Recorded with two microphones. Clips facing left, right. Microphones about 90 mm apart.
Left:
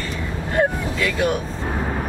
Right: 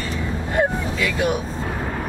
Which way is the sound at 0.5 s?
10° right (ahead or behind).